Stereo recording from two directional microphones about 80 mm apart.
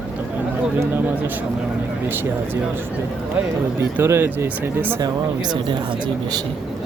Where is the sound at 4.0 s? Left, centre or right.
Right.